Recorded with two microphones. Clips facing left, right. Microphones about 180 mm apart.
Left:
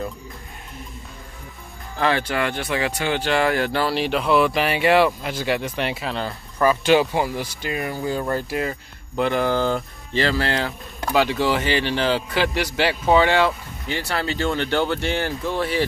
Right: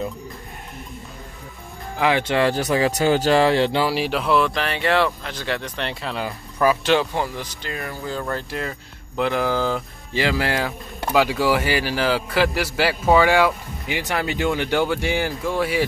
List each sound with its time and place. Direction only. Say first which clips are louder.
2.0 s speech: right 2 dB; 15° right (ahead or behind)
2.5 s speech: right 4 dB; 40° right (ahead or behind)
3.4 s speech: right 3 dB; 25° right (ahead or behind)
3.8 s speech: even; 5° right (ahead or behind)
6.1 s speech: even; 5° right (ahead or behind)
6.9 s speech: left 2 dB; 10° left (ahead or behind)
10.2 s speech: right 1 dB; 15° right (ahead or behind)